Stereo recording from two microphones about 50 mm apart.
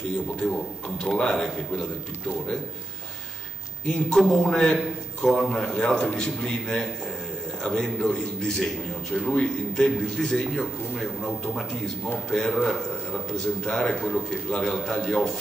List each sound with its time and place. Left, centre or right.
1.0 s a man's voice: centre
3.8 s a man's voice: centre